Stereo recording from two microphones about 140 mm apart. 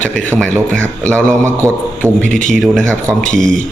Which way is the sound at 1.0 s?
10° left (ahead or behind).